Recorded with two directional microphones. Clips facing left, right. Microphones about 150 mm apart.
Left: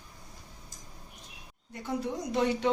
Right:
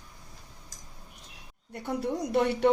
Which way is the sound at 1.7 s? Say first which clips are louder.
Right 2 dB; 60° right (ahead or behind).